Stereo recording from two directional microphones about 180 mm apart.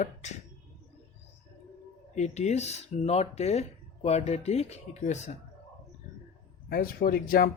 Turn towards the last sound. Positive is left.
turn(degrees=55)  # may be behind; listen again after turning